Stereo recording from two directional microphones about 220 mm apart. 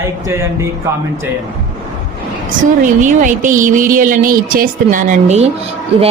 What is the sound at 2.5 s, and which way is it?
A woman's voice, 35° right (ahead or behind).